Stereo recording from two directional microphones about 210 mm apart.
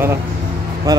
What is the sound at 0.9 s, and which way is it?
Speech, 15° right (ahead or behind).